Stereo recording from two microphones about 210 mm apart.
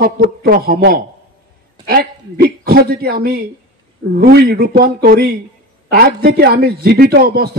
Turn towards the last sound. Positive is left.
turn(degrees=-45)  # may be behind; listen again after turning